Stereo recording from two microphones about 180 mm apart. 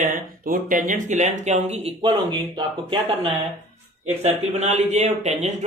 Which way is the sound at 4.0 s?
35° right (ahead or behind).